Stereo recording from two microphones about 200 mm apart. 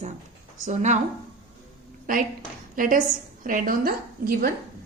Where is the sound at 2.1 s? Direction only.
45° right (ahead or behind).